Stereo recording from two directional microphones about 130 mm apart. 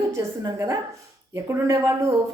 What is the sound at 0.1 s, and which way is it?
A woman's voice, 25° right (ahead or behind).